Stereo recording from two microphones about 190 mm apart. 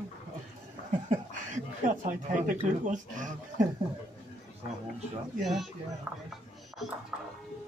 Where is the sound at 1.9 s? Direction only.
40° right (ahead or behind).